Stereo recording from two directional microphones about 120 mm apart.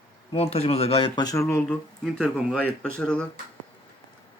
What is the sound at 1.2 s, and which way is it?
Speech, 30° left (ahead or behind).